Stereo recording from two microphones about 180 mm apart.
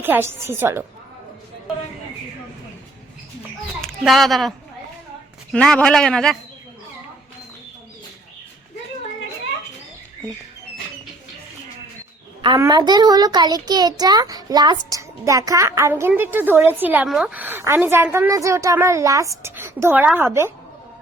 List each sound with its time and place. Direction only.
0.0 s a child's voice: 10° right (ahead or behind)
3.8 s a woman's voice: centre (ahead or behind)
12.5 s a child's voice: 20° right (ahead or behind)